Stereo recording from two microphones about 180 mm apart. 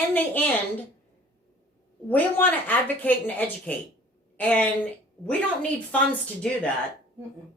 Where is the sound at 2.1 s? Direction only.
10° left (ahead or behind).